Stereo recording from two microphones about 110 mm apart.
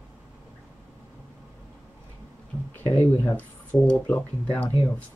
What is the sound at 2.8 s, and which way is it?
Speech, 20° left (ahead or behind).